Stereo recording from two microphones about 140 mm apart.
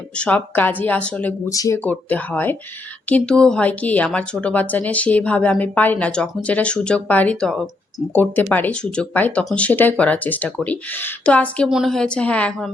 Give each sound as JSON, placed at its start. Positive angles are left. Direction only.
{"t": 0.2, "sound": "a woman's voice", "side_deg": 10}
{"t": 1.5, "sound": "speech", "side_deg": 25}
{"t": 1.8, "sound": "a woman's voice", "side_deg": 10}